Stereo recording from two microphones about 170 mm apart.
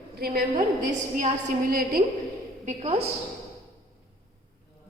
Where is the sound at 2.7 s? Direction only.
40° right (ahead or behind).